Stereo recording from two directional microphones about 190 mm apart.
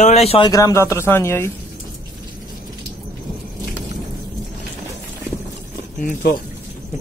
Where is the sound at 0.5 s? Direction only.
15° left (ahead or behind).